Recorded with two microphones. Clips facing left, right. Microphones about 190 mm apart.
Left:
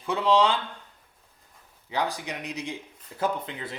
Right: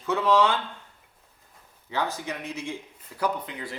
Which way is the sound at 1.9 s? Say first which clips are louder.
Even; 15° left (ahead or behind).